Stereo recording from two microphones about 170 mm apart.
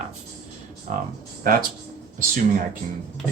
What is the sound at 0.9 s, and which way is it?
Speech, 50° right (ahead or behind).